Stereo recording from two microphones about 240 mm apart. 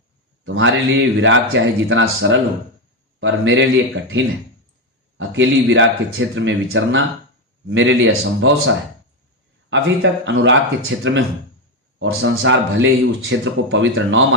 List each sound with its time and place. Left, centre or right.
0.4 s speech: right
5.1 s speech: right